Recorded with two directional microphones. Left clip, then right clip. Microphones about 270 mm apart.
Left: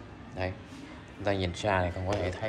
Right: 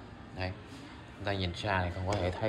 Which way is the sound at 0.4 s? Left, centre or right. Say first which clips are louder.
Left 4 dB; centre.